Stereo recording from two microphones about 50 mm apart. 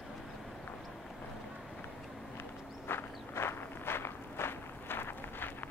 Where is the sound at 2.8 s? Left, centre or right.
Left.